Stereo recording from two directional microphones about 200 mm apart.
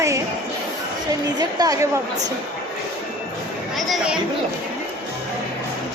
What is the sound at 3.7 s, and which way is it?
Speech, centre (ahead or behind).